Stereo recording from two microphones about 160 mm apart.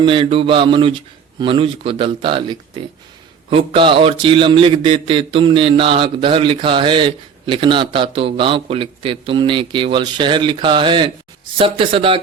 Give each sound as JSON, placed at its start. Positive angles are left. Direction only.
{"t": 0.0, "sound": "speech", "side_deg": -30}